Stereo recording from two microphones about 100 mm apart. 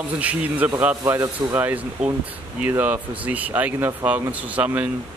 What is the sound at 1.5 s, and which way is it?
Speech, 15° right (ahead or behind).